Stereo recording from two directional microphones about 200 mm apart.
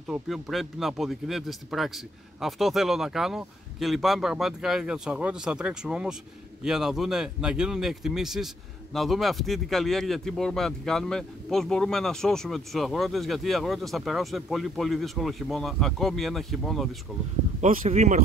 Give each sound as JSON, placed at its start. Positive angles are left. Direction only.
{"t": 0.1, "sound": "speech", "side_deg": 0}
{"t": 17.6, "sound": "speech", "side_deg": -35}